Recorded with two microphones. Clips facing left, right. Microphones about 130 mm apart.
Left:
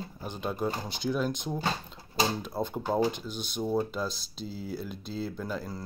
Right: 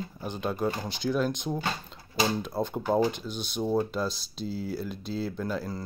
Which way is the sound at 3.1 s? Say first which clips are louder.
Right 2 dB; 50° left (ahead or behind).